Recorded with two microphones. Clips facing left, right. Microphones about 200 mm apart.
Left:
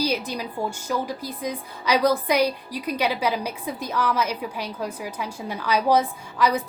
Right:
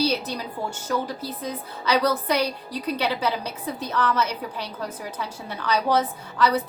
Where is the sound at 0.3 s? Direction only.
10° left (ahead or behind).